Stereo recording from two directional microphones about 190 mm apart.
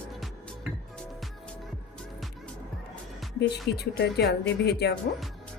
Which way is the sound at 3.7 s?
60° left (ahead or behind).